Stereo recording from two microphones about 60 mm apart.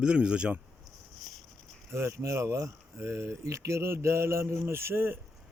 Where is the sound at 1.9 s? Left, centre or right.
Right.